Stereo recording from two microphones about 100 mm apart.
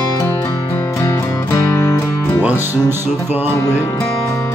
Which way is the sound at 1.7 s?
25° left (ahead or behind).